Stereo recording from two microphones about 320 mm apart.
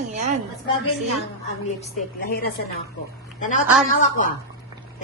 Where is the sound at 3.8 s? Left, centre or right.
Left.